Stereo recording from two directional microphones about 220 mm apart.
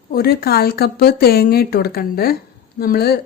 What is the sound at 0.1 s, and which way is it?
Speech, 45° left (ahead or behind).